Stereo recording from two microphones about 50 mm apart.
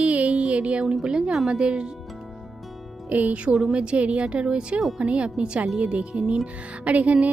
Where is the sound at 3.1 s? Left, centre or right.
Right.